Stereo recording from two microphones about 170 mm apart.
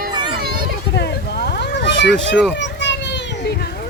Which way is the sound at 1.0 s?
75° left (ahead or behind).